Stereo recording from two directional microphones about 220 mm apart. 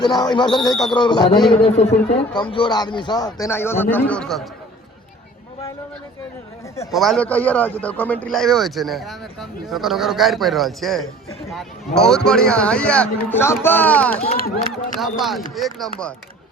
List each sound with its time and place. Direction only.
0.0 s a man's voice: 20° left (ahead or behind); by 4.4 s 5° left (ahead or behind)
6.9 s a man's voice: centre (ahead or behind)
14.3 s speech: 40° left (ahead or behind)
15.0 s a man's voice: centre (ahead or behind)